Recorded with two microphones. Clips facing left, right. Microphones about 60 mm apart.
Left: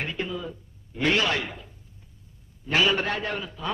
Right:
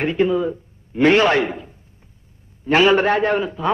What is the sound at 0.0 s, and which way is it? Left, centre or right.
A man's voice, right.